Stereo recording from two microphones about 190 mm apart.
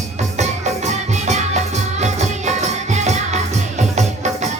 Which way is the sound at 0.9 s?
35° right (ahead or behind).